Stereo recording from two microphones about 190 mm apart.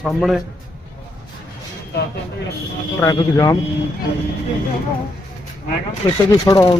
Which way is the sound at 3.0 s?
15° left (ahead or behind).